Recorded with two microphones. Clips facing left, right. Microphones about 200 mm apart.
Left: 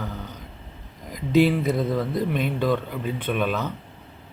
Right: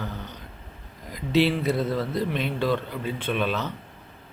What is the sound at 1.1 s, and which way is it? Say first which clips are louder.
Speech: left 3 dB; 50° left (ahead or behind).